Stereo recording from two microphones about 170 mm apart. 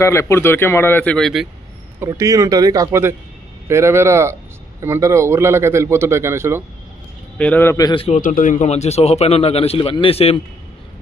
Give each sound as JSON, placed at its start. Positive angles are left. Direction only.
{"t": 0.0, "sound": "speech", "side_deg": 15}
{"t": 2.0, "sound": "speech", "side_deg": -20}
{"t": 7.3, "sound": "speech", "side_deg": 10}
{"t": 7.9, "sound": "speech", "side_deg": 35}
{"t": 8.2, "sound": "speech", "side_deg": 50}